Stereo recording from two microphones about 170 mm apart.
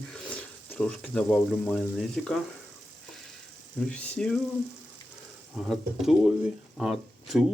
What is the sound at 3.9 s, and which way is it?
Speech, 5° left (ahead or behind).